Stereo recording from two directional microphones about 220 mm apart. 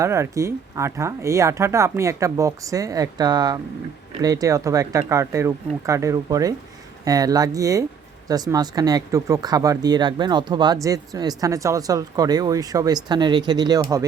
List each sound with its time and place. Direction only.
0.0 s speech: 15° right (ahead or behind)